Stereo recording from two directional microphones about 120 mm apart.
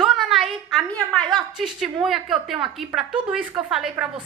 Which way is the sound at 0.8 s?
10° left (ahead or behind).